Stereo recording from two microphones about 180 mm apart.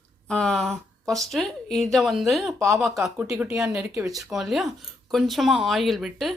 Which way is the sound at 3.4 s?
15° right (ahead or behind).